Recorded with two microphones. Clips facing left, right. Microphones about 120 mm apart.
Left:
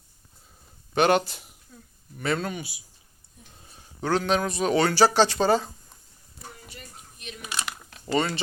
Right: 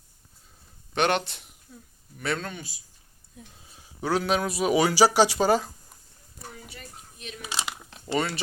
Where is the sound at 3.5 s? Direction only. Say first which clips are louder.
Left 5 dB; 5° right (ahead or behind).